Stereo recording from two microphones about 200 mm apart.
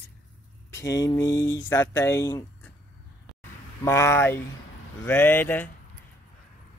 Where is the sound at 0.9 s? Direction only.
15° left (ahead or behind).